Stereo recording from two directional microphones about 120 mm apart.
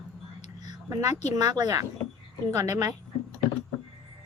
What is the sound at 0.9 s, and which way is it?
A woman's voice, 30° right (ahead or behind).